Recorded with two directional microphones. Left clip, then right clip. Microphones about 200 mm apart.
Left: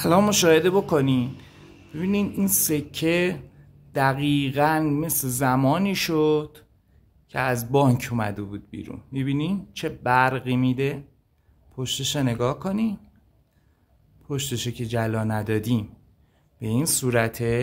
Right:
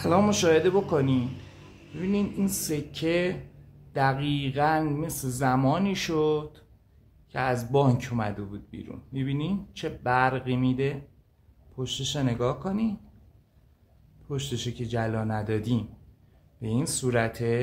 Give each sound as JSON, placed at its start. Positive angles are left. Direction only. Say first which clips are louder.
{"t": 0.0, "sound": "speech", "louder": "left 4 dB", "side_deg": 40}
{"t": 14.2, "sound": "speech", "louder": "left 4 dB", "side_deg": 35}